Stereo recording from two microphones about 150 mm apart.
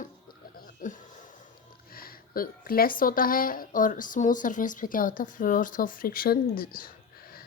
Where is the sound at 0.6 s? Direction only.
60° left (ahead or behind).